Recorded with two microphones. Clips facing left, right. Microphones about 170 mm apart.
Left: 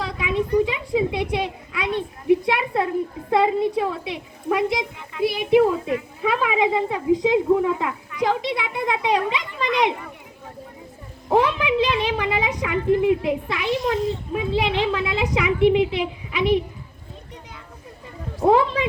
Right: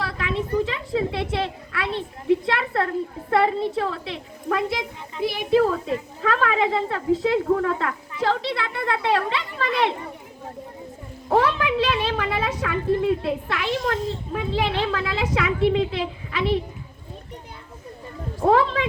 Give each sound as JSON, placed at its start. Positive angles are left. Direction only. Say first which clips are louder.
{"t": 0.0, "sound": "a sound", "louder": "left 3 dB", "side_deg": 20}
{"t": 0.9, "sound": "a child's voice", "louder": "left 2 dB", "side_deg": 15}
{"t": 11.3, "sound": "a child's voice", "louder": "left 1 dB", "side_deg": 15}
{"t": 18.4, "sound": "a child's voice", "louder": "left 1 dB", "side_deg": 15}